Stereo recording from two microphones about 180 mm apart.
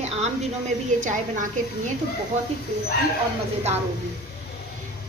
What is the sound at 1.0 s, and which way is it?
Speech, 45° right (ahead or behind).